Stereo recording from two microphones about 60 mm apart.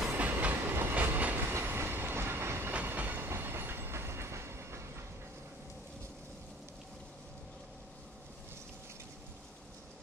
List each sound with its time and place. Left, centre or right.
0.3 s train: right
1.5 s train: right
2.7 s train: right